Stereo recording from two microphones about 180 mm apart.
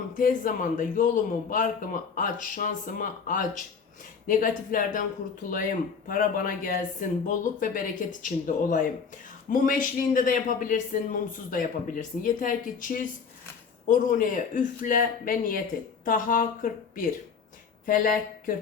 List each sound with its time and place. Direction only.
0.1 s a man's voice: 50° left (ahead or behind)